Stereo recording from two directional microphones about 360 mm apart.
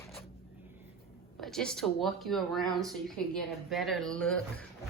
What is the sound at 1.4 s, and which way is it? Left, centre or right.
Speech, centre.